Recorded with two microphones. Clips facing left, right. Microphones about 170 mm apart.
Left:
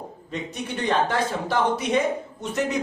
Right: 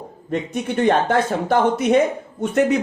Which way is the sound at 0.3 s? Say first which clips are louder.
Right 8 dB; 55° right (ahead or behind).